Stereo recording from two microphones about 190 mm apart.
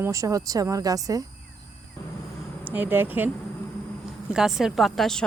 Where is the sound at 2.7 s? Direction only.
10° right (ahead or behind).